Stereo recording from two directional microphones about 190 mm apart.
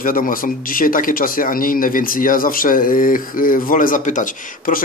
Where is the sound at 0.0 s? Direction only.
45° left (ahead or behind).